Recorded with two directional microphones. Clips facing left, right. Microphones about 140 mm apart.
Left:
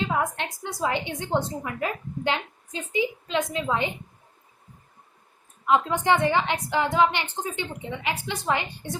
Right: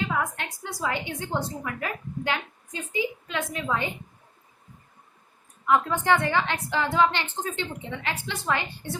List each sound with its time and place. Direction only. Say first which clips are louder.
0.2 s a woman's voice: left 2 dB; 20° left (ahead or behind)
5.6 s a woman's voice: left 1 dB; 20° left (ahead or behind)